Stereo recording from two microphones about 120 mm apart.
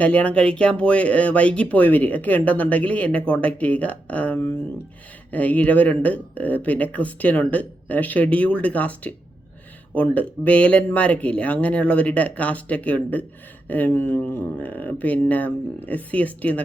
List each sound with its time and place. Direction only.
0.0 s speech: 10° left (ahead or behind)